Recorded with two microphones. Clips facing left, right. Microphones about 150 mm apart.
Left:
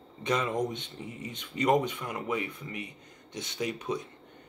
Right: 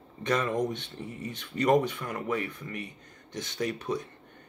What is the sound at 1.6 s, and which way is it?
Speech, 20° left (ahead or behind).